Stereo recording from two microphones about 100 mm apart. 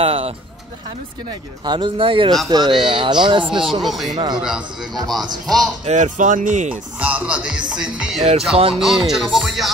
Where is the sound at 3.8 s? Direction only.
Centre (ahead or behind).